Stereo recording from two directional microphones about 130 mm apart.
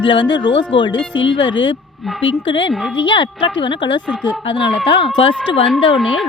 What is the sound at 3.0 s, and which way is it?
Speech, 40° left (ahead or behind).